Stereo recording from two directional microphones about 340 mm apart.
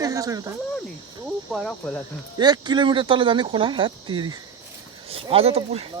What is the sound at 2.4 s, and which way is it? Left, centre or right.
Speech, centre.